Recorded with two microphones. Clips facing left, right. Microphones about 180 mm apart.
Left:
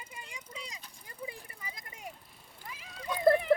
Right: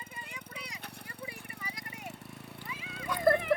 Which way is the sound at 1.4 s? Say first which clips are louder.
Right 4 dB; 70° right (ahead or behind).